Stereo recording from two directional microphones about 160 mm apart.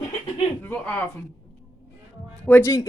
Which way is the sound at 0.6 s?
10° left (ahead or behind).